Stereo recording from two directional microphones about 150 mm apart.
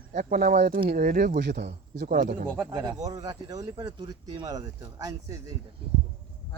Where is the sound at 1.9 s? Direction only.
75° right (ahead or behind).